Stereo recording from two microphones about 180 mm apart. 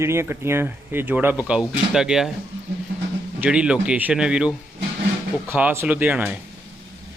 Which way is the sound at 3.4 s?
5° right (ahead or behind).